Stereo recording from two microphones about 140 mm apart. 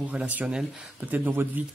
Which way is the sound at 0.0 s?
10° right (ahead or behind).